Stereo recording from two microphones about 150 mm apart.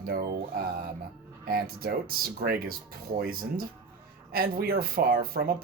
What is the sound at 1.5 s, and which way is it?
Speech, 80° right.